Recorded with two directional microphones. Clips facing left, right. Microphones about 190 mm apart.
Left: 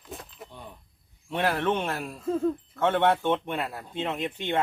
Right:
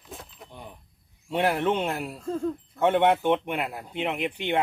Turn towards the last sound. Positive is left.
turn(degrees=-15)  # may be behind; listen again after turning